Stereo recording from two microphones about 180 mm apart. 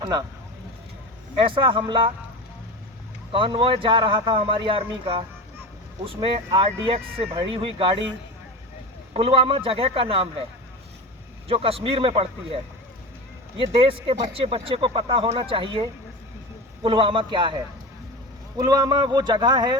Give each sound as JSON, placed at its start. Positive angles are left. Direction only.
{"t": 0.0, "sound": "speech", "side_deg": -20}
{"t": 1.4, "sound": "speech", "side_deg": -30}
{"t": 3.3, "sound": "speech", "side_deg": -30}
{"t": 9.1, "sound": "a man's voice", "side_deg": -30}
{"t": 11.4, "sound": "a man's voice", "side_deg": -30}
{"t": 13.7, "sound": "speech", "side_deg": -30}